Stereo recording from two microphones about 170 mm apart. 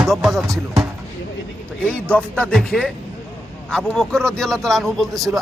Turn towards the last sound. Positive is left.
turn(degrees=0)  # may be behind; listen again after turning